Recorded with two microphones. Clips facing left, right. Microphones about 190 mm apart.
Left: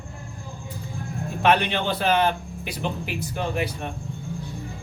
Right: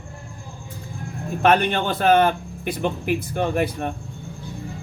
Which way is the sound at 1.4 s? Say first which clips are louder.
Right 3 dB; 50° right (ahead or behind).